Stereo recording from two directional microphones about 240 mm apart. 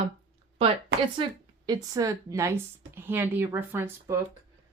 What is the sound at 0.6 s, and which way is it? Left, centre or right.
A woman's voice, right.